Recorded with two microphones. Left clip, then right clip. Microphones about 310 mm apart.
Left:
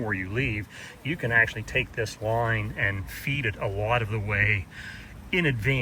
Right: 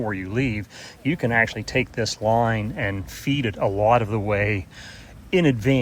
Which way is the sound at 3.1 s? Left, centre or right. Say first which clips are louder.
Right 4 dB; centre.